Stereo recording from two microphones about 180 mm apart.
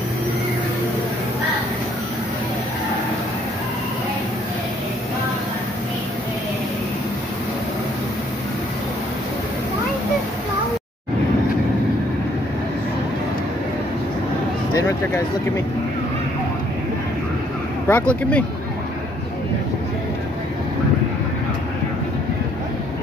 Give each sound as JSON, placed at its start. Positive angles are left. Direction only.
{"t": 14.7, "sound": "speech", "side_deg": 20}
{"t": 17.8, "sound": "speech", "side_deg": 10}